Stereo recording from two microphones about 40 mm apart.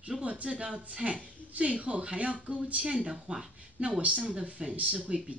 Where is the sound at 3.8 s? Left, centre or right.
Right.